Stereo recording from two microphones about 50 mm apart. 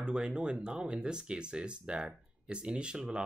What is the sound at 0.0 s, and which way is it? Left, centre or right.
Speech, centre.